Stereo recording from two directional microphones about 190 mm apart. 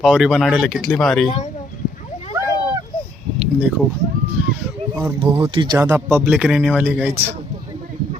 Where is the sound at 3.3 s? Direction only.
5° right (ahead or behind).